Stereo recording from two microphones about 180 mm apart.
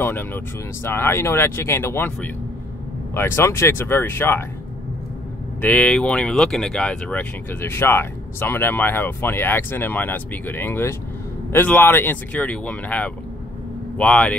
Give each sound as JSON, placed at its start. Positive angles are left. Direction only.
{"t": 0.0, "sound": "speech", "side_deg": 10}
{"t": 5.6, "sound": "speech", "side_deg": 5}